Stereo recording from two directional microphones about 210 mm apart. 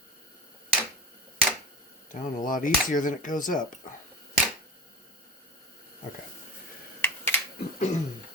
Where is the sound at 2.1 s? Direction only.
40° left (ahead or behind).